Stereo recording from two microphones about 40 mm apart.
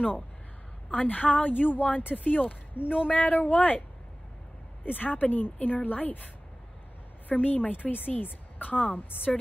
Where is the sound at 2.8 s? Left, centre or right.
Right.